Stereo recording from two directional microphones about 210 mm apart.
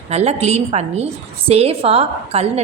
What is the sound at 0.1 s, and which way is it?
A woman's voice, 30° right (ahead or behind).